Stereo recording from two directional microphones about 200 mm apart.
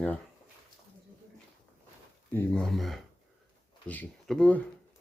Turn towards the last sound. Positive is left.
turn(degrees=5)  # may be behind; listen again after turning